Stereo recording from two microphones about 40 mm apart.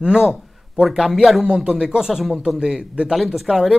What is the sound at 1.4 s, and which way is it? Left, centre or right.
Speech, right.